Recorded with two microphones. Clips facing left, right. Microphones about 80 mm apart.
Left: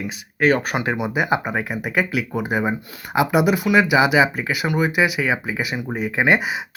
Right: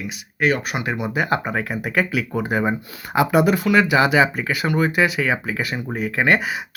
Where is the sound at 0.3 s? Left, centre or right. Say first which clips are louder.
Left 3 dB; left.